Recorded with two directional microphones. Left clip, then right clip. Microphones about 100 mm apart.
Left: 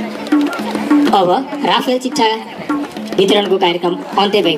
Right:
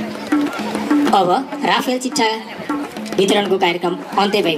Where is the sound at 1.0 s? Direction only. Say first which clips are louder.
Left 1 dB; 5° right (ahead or behind).